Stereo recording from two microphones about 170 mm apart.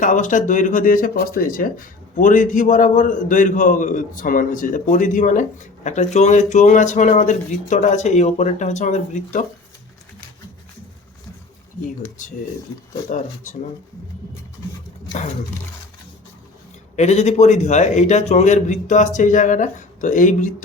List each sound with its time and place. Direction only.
0.0 s speech: 50° left (ahead or behind)
13.1 s speech: 45° left (ahead or behind)
16.9 s speech: 40° left (ahead or behind)